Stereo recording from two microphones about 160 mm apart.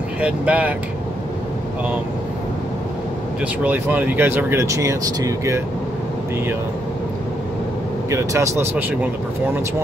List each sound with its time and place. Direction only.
0.2 s speech: 10° right (ahead or behind)
3.6 s speech: 10° right (ahead or behind)
8.1 s speech: 20° right (ahead or behind)